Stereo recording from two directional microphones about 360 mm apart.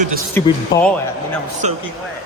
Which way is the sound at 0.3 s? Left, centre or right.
Centre.